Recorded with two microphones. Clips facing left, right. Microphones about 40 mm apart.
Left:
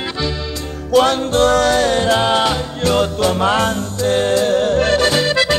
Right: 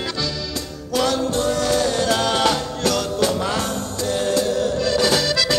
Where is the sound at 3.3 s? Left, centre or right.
Left.